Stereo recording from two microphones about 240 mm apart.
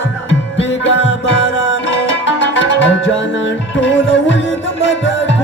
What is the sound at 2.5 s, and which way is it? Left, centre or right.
Music, left.